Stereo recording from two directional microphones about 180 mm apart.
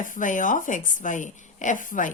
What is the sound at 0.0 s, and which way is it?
A woman's voice, 45° left (ahead or behind).